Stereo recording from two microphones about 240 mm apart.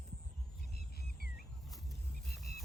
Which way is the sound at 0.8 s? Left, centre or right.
Left.